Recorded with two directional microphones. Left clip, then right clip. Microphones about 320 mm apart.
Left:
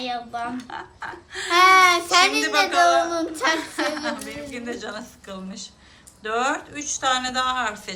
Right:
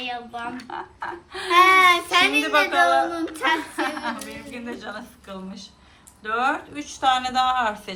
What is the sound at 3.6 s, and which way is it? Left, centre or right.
A woman's voice, centre.